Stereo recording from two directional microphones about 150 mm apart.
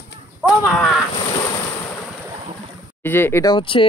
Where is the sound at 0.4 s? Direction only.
Centre (ahead or behind).